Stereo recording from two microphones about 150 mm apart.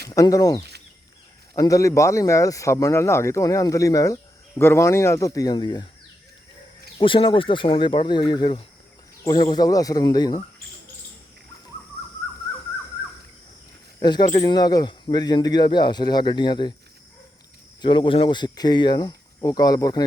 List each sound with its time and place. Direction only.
0.1 s speech: 25° left (ahead or behind)
7.0 s speech: 35° left (ahead or behind)
14.0 s speech: 30° left (ahead or behind)
17.8 s speech: 35° left (ahead or behind)